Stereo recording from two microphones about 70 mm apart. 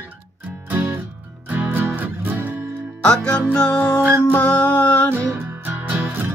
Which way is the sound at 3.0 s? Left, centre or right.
Centre.